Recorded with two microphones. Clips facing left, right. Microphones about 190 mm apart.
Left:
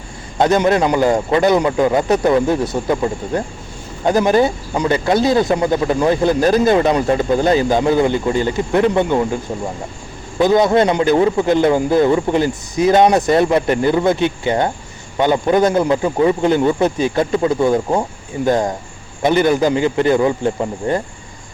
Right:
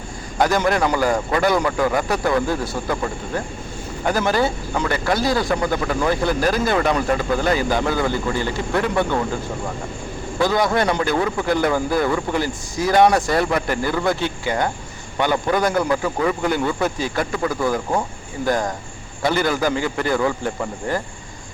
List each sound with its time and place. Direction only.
0.3 s speech: 20° left (ahead or behind)
10.3 s speech: 20° left (ahead or behind)